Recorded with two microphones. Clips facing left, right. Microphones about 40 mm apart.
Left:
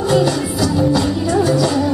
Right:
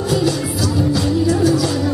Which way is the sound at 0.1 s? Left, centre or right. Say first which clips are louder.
Left 3 dB; centre.